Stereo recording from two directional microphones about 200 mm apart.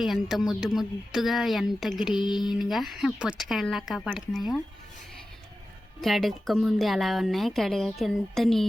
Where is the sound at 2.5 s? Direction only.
Centre (ahead or behind).